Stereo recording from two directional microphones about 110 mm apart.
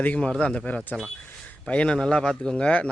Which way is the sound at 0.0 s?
10° left (ahead or behind).